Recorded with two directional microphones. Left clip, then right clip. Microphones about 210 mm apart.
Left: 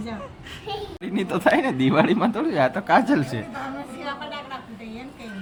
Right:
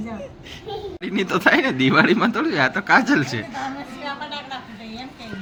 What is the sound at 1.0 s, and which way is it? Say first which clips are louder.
Speech: right 3 dB; 5° left (ahead or behind).